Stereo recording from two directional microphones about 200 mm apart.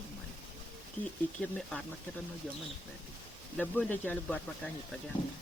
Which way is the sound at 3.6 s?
10° left (ahead or behind).